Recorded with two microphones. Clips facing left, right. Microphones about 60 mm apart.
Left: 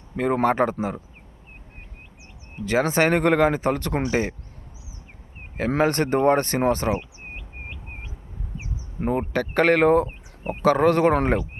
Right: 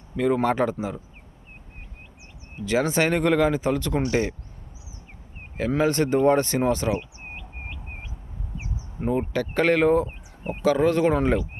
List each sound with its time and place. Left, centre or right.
0.2 s speech: left
2.6 s speech: left
4.0 s speech: left
5.5 s speech: left
9.0 s speech: left